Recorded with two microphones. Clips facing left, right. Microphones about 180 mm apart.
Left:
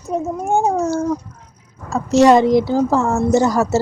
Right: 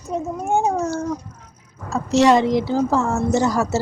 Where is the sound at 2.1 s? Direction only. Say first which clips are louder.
Left 4 dB; 45° left (ahead or behind).